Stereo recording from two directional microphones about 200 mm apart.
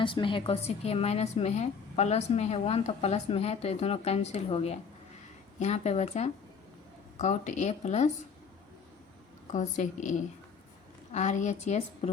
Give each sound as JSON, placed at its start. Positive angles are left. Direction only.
{"t": 0.0, "sound": "a woman's voice", "side_deg": 25}
{"t": 9.5, "sound": "a woman's voice", "side_deg": 35}